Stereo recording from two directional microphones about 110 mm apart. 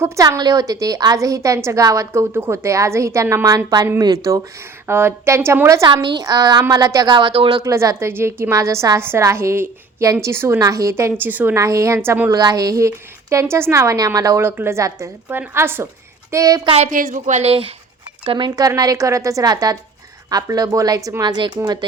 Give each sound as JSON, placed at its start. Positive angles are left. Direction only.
{"t": 0.0, "sound": "a woman's voice", "side_deg": -30}
{"t": 4.9, "sound": "a woman's voice", "side_deg": -20}
{"t": 5.9, "sound": "a woman's voice", "side_deg": -45}
{"t": 7.6, "sound": "a woman's voice", "side_deg": -30}
{"t": 11.5, "sound": "a woman's voice", "side_deg": -30}
{"t": 12.0, "sound": "a woman's voice", "side_deg": -15}
{"t": 12.3, "sound": "a woman's voice", "side_deg": -35}
{"t": 16.6, "sound": "a woman's voice", "side_deg": -80}
{"t": 18.3, "sound": "a woman's voice", "side_deg": -45}